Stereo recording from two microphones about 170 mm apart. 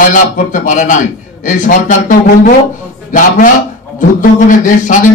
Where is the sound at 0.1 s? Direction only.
50° left (ahead or behind).